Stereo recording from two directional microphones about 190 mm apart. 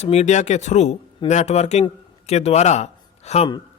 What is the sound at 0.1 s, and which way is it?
A man's voice, 35° left (ahead or behind).